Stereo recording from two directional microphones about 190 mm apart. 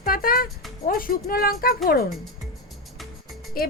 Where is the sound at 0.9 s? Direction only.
50° left (ahead or behind).